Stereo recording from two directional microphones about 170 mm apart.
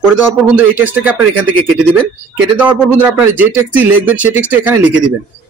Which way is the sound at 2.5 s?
10° right (ahead or behind).